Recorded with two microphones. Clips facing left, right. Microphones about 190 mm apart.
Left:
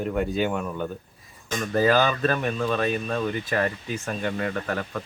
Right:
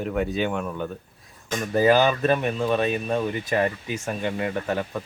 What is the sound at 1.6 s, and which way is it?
Speech, 15° right (ahead or behind).